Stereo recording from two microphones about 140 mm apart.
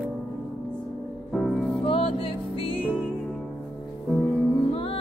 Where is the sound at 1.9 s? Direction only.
40° left (ahead or behind).